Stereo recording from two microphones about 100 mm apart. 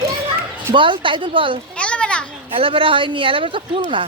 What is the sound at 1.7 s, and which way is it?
Children playing, 10° left (ahead or behind).